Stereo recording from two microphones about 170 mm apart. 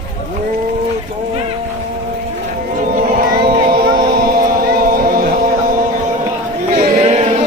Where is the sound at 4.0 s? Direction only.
60° right (ahead or behind).